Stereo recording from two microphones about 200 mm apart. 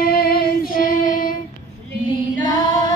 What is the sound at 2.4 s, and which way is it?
Female singing, 20° left (ahead or behind).